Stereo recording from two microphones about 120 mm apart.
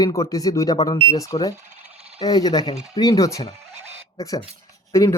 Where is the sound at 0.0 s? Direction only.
25° left (ahead or behind).